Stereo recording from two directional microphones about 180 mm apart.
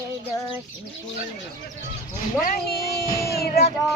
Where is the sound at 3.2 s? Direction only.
60° left (ahead or behind).